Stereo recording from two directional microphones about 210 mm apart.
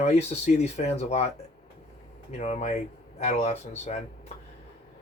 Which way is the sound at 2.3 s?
30° left (ahead or behind).